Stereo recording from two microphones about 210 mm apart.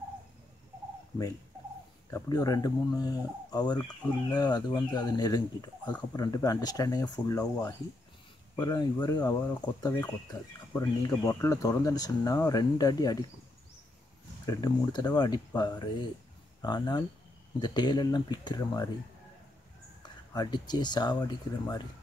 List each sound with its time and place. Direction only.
2.0 s speech: 15° left (ahead or behind)
14.4 s speech: 20° left (ahead or behind)
20.3 s speech: 20° left (ahead or behind)